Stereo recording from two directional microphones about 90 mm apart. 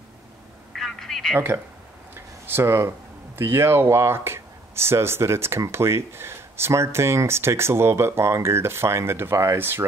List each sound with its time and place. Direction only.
0.7 s telephone: 5° left (ahead or behind)
2.1 s a sound: 25° right (ahead or behind)
3.3 s speech: 25° right (ahead or behind)